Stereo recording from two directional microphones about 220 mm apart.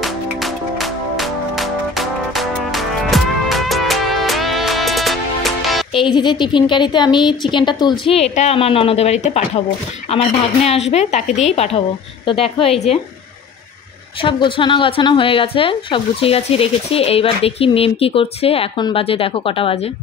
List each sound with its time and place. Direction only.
0.0 s music: centre (ahead or behind)
5.9 s speech: 20° left (ahead or behind)
14.2 s speech: 20° left (ahead or behind)